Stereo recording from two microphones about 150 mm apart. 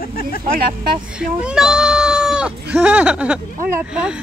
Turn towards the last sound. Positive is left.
turn(degrees=-5)  # may be behind; listen again after turning